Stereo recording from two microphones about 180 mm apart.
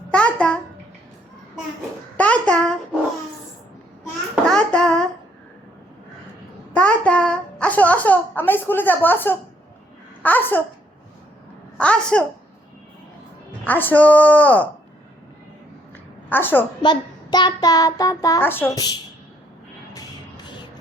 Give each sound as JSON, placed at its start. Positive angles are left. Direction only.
{"t": 0.1, "sound": "babbling", "side_deg": 5}
{"t": 2.1, "sound": "a sound", "side_deg": 5}
{"t": 4.4, "sound": "a sound", "side_deg": 5}
{"t": 6.7, "sound": "a sound", "side_deg": 5}
{"t": 10.2, "sound": "a woman's voice", "side_deg": 10}
{"t": 11.8, "sound": "a woman's voice", "side_deg": 5}
{"t": 13.7, "sound": "a woman's voice", "side_deg": 10}
{"t": 16.3, "sound": "a woman's voice", "side_deg": 10}
{"t": 16.8, "sound": "child singing", "side_deg": 25}
{"t": 19.9, "sound": "music", "side_deg": 20}